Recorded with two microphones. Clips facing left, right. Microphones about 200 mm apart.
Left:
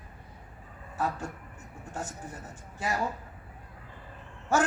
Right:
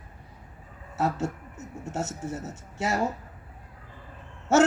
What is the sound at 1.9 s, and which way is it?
Speech, 80° right.